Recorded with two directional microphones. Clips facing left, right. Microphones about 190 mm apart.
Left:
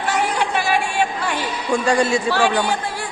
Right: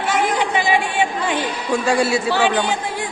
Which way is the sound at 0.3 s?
15° right (ahead or behind).